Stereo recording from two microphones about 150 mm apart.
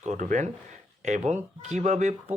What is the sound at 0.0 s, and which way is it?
Speech, 55° right (ahead or behind).